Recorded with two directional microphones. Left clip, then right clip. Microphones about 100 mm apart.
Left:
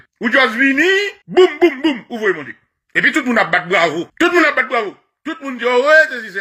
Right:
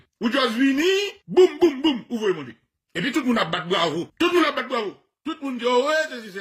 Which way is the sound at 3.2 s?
35° right (ahead or behind).